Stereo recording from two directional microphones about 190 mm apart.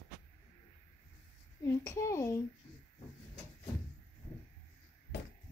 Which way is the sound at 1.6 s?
15° left (ahead or behind).